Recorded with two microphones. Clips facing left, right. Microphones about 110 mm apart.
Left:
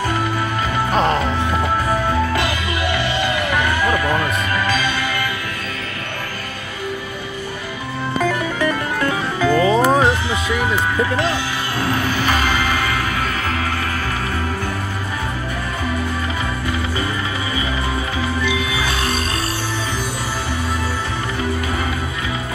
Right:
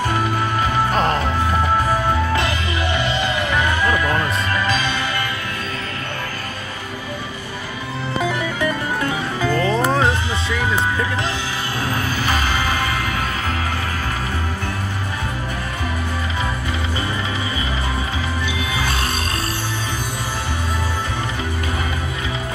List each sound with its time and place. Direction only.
0.9 s music: centre (ahead or behind)
3.0 s music: 25° right (ahead or behind)
9.5 s music: 5° left (ahead or behind)